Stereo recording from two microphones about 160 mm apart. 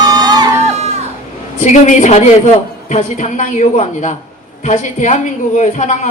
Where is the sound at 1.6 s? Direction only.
50° left (ahead or behind).